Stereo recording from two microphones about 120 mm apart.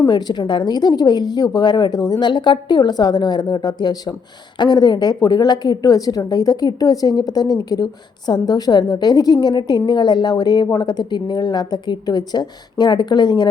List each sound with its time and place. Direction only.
0.1 s a woman's voice: 35° left (ahead or behind)